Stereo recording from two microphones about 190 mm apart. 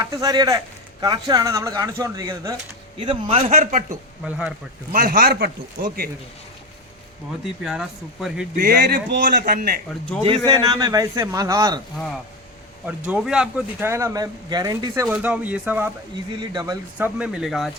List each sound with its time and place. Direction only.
0.0 s speech: 20° right (ahead or behind); by 3.8 s 40° right (ahead or behind)
3.8 s speech: 5° right (ahead or behind)
4.9 s speech: 50° right (ahead or behind)
7.6 s speech: centre (ahead or behind)
8.5 s speech: 50° right (ahead or behind)
10.2 s speech: 25° right (ahead or behind)
13.1 s speech: 5° right (ahead or behind); by 15.0 s 20° right (ahead or behind)
15.0 s speech: 5° right (ahead or behind)
16.4 s speech: 20° right (ahead or behind)
17.0 s speech: 5° right (ahead or behind)